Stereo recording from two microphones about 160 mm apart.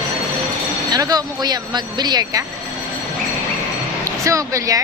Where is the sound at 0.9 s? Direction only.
25° right (ahead or behind).